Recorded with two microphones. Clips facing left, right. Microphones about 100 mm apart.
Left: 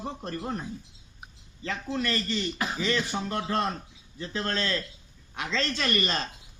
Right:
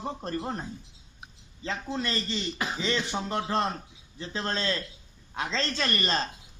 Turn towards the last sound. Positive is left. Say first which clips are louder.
# left 1 dB
turn(degrees=-35)  # may be behind; listen again after turning